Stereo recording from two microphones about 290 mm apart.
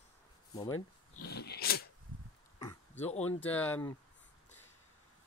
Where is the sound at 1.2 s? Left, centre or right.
Left.